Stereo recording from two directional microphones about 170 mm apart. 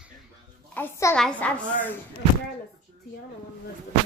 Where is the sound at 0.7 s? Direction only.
15° left (ahead or behind).